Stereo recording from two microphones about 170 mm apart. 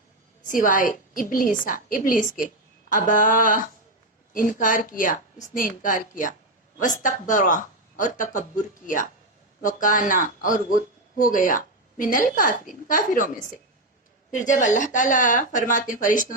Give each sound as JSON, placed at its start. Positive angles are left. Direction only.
{"t": 0.4, "sound": "speech", "side_deg": 50}
{"t": 9.6, "sound": "speech", "side_deg": 50}
{"t": 14.3, "sound": "speech", "side_deg": 45}